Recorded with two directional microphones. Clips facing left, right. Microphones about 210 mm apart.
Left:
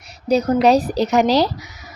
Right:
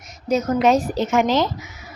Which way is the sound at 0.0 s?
35° left (ahead or behind).